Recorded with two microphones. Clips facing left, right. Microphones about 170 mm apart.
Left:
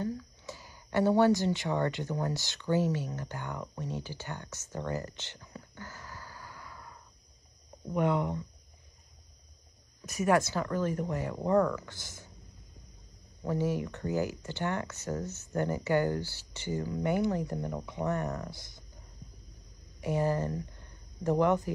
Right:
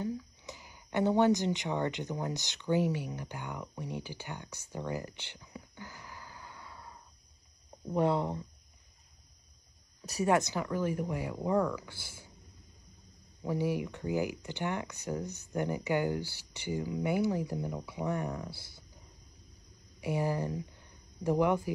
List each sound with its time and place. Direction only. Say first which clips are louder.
0.0 s speech: left 1 dB; 15° right (ahead or behind)
3.7 s a sound: left 2 dB; 15° right (ahead or behind)
7.9 s speech: even; 35° right (ahead or behind)
10.2 s speech: left 2 dB; 20° right (ahead or behind)
13.5 s speech: left 1 dB; 10° right (ahead or behind)
20.0 s speech: left 2 dB; 15° right (ahead or behind)